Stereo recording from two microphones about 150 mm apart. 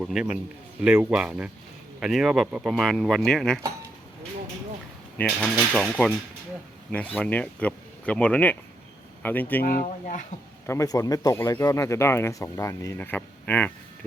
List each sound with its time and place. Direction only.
0.0 s speech: 5° right (ahead or behind)
5.1 s speech: 10° left (ahead or behind)
10.7 s speech: 20° left (ahead or behind)